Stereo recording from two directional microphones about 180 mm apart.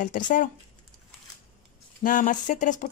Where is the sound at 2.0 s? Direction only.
45° left (ahead or behind).